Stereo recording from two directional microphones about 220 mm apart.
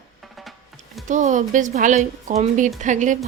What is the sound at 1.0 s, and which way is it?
A woman's voice, 35° right (ahead or behind).